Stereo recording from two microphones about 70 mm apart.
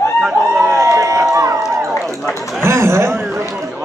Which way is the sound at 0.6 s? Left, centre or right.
Right.